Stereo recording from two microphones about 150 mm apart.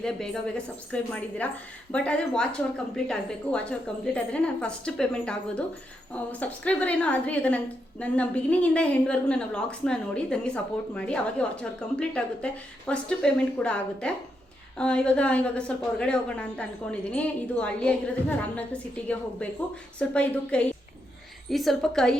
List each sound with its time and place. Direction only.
0.0 s a woman's voice: 5° left (ahead or behind)